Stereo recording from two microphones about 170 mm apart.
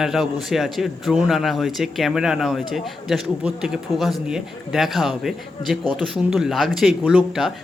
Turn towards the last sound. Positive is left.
turn(degrees=-5)  # may be behind; listen again after turning